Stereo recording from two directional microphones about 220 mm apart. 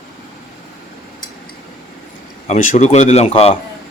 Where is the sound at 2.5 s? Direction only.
35° left (ahead or behind).